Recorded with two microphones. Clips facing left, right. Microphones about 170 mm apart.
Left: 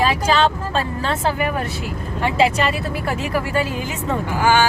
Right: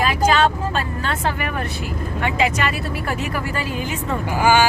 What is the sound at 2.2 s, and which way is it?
Speech, 30° left (ahead or behind).